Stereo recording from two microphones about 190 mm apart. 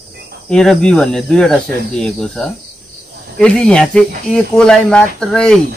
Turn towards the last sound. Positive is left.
turn(degrees=5)  # may be behind; listen again after turning